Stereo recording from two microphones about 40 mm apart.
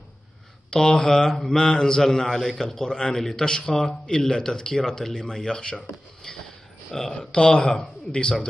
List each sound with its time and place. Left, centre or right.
0.7 s speech: centre
6.2 s train: centre
6.9 s speech: centre
7.3 s speech: left